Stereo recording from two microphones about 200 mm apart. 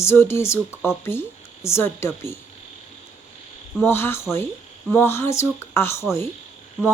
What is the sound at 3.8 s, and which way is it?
Speech, 10° left (ahead or behind).